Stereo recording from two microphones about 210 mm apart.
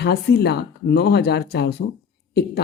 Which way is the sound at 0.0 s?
50° left (ahead or behind).